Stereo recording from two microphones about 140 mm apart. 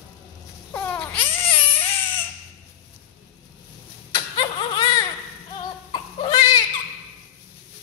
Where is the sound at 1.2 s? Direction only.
40° left (ahead or behind).